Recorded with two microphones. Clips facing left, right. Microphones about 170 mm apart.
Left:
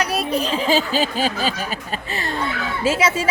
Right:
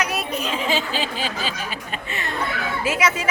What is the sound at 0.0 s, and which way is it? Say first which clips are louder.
Speech: left 4 dB; 35° left (ahead or behind).